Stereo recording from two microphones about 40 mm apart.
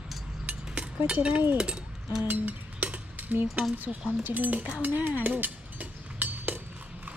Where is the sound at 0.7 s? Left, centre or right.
Right.